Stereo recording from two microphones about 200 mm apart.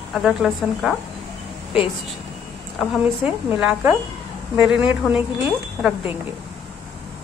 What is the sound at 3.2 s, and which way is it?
A woman's voice, 10° right (ahead or behind).